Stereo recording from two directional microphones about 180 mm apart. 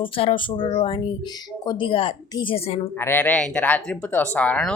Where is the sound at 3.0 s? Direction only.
10° left (ahead or behind).